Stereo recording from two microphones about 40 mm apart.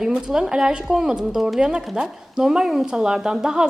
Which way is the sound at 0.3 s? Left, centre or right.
Centre.